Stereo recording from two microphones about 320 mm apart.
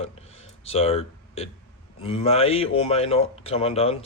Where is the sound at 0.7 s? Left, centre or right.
Centre.